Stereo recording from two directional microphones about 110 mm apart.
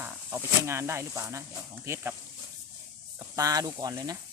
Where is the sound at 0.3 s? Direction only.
25° right (ahead or behind).